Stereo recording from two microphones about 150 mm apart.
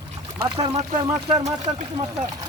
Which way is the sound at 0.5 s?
40° right (ahead or behind).